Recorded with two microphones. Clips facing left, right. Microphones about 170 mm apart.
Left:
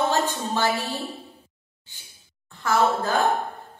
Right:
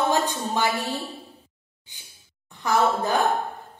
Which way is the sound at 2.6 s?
15° right (ahead or behind).